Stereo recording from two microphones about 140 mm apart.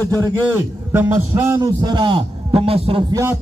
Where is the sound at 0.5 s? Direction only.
15° right (ahead or behind).